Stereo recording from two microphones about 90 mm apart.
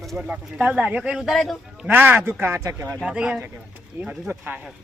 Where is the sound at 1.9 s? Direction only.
25° right (ahead or behind).